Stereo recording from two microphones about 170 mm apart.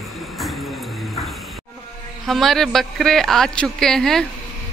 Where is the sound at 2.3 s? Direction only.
Centre (ahead or behind).